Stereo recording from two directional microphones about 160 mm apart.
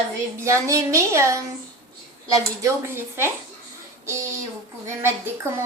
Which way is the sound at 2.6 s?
15° right (ahead or behind).